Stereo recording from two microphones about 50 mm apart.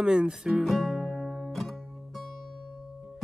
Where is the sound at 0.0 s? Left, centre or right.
Centre.